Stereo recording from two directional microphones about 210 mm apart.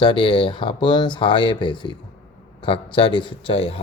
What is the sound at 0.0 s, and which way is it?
Speech, 25° left (ahead or behind).